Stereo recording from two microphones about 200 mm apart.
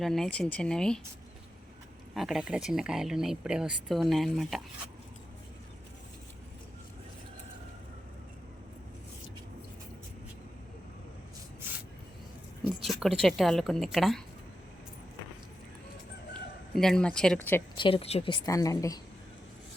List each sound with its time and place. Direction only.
0.0 s speech: centre (ahead or behind)
2.1 s speech: centre (ahead or behind)
12.6 s a woman's voice: centre (ahead or behind)
16.7 s speech: centre (ahead or behind)
17.7 s a woman's voice: 25° left (ahead or behind)